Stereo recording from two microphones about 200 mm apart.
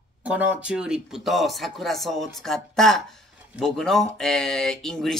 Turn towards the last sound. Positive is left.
turn(degrees=0)  # may be behind; listen again after turning